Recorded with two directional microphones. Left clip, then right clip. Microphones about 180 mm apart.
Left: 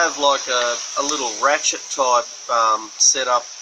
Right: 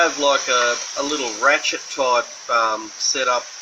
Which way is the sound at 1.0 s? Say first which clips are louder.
Left 1 dB; centre (ahead or behind).